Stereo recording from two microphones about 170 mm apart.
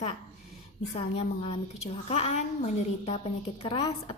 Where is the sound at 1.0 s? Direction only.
30° left (ahead or behind).